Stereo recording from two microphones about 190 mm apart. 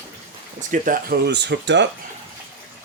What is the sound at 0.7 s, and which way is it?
A man's voice, 50° right (ahead or behind).